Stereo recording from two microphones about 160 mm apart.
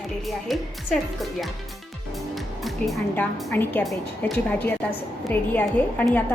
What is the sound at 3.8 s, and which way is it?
Speech, centre (ahead or behind).